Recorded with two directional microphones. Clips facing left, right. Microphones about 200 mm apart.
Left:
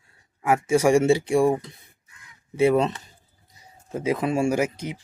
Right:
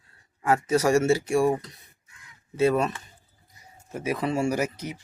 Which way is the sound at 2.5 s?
15° left (ahead or behind).